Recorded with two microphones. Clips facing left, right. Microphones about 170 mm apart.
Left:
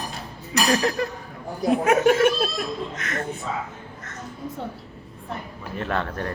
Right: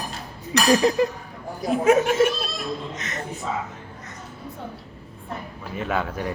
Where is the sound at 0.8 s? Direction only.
15° right (ahead or behind).